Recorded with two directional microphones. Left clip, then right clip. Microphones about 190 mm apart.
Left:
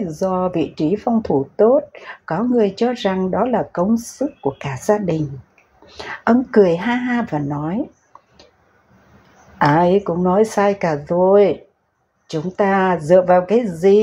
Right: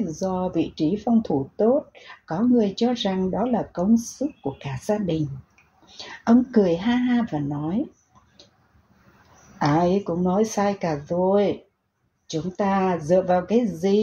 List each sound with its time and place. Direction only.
0.1 s speech: 20° left (ahead or behind)
9.6 s speech: 15° left (ahead or behind)